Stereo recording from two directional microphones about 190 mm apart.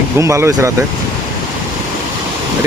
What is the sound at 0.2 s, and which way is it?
Speech, 15° right (ahead or behind).